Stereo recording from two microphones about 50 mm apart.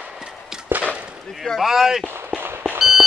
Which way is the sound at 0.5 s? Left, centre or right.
Centre.